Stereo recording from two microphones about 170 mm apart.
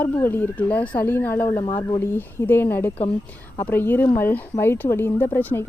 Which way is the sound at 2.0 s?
15° left (ahead or behind).